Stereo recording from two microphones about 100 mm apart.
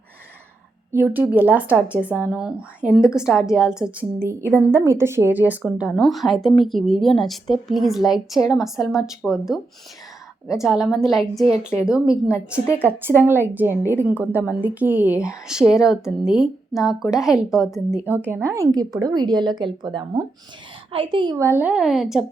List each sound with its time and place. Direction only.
0.9 s a woman's voice: 20° right (ahead or behind)
4.4 s a woman's voice: 25° right (ahead or behind); by 12.2 s 10° right (ahead or behind)
12.8 s a woman's voice: 20° right (ahead or behind); by 17.3 s 5° right (ahead or behind)
18.3 s a woman's voice: 25° right (ahead or behind); by 20.2 s 50° right (ahead or behind)
20.9 s a woman's voice: 60° right (ahead or behind)
21.3 s a woman's voice: 30° right (ahead or behind)
21.6 s a woman's voice: 10° right (ahead or behind)